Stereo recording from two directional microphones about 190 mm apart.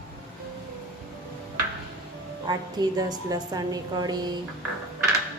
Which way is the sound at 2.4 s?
20° right (ahead or behind).